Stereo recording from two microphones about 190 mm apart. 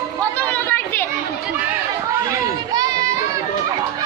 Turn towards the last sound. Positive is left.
turn(degrees=-20)  # may be behind; listen again after turning